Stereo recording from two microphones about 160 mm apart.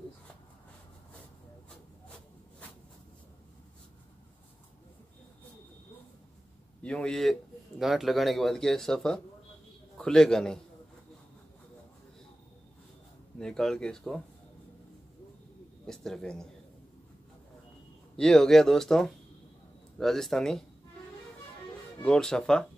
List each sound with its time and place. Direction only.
6.8 s speech: 5° left (ahead or behind)
13.4 s speech: 5° left (ahead or behind)
15.9 s speech: 5° left (ahead or behind)
18.1 s speech: 5° left (ahead or behind)
22.0 s speech: 5° left (ahead or behind)